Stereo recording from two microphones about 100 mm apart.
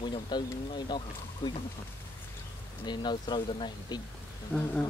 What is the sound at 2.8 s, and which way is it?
Speech, 45° left (ahead or behind).